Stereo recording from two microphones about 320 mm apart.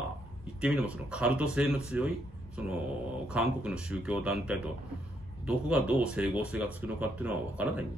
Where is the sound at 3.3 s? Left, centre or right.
Centre.